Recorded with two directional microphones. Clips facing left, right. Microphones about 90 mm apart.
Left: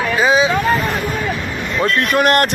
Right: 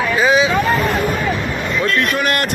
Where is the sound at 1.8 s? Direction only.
50° left (ahead or behind).